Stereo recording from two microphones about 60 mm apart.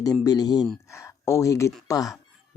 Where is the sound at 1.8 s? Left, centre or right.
Left.